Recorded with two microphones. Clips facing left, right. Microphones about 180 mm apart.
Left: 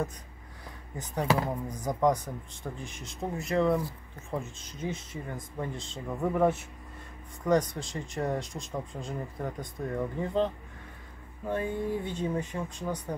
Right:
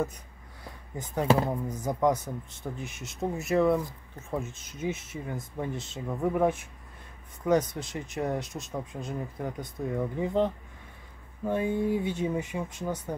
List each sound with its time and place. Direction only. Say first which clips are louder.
1.2 s speech: right 3 dB; 25° right (ahead or behind)
1.7 s speech: left 2 dB; 5° right (ahead or behind)
4.9 s speech: right 2 dB; 5° right (ahead or behind)